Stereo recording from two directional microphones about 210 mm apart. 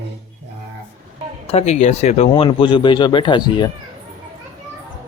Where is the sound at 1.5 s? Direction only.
30° left (ahead or behind).